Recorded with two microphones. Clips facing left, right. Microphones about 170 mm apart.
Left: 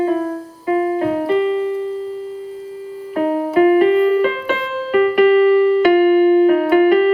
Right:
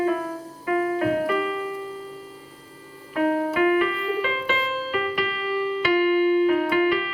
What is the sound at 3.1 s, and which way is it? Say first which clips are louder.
Music: left 6 dB; 35° left (ahead or behind).